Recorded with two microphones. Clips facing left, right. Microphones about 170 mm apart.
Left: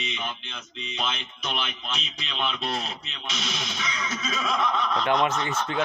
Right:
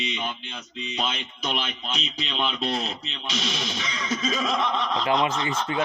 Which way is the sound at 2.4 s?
35° right (ahead or behind).